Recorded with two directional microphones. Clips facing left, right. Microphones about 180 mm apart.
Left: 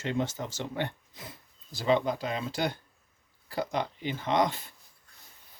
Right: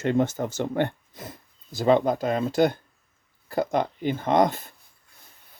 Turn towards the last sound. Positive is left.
turn(degrees=-50)  # may be behind; listen again after turning